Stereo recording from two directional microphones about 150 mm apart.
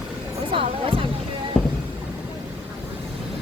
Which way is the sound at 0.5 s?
35° right (ahead or behind).